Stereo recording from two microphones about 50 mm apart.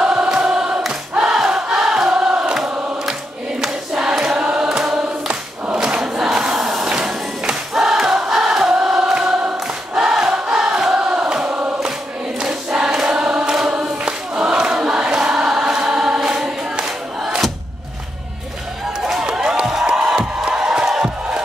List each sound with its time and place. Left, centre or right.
0.0 s choir: centre
4.4 s choir: centre
6.8 s music: centre
8.8 s choir: centre
11.0 s chant: centre
12.4 s choir: centre
16.3 s music: centre
19.2 s music: centre